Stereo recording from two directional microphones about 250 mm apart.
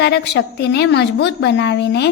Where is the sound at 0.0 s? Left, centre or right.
Left.